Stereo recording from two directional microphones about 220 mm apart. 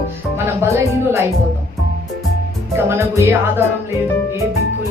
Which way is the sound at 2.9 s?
10° right (ahead or behind).